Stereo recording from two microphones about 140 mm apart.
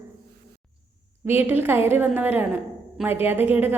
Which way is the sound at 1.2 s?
15° right (ahead or behind).